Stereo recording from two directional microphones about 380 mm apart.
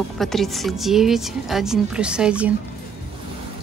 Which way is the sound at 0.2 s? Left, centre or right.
Centre.